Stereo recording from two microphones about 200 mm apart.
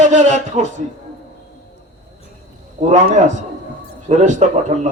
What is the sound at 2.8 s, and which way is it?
A man's voice, 35° right (ahead or behind).